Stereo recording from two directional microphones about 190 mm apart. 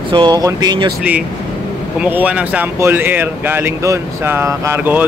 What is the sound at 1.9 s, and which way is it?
Speech, 10° right (ahead or behind).